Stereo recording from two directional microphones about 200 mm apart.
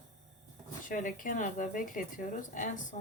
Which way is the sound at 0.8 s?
40° left (ahead or behind).